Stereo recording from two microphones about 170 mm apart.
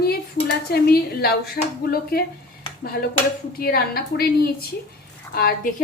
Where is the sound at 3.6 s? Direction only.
60° left (ahead or behind).